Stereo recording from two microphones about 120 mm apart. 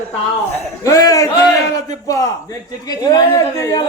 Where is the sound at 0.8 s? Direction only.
30° left (ahead or behind).